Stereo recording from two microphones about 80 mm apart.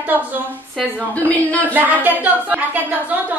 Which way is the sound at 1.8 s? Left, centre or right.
Right.